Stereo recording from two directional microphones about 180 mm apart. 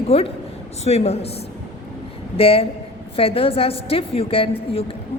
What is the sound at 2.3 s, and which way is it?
A woman's voice, 30° left (ahead or behind).